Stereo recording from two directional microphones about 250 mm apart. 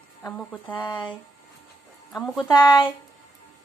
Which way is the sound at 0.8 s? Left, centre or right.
Centre.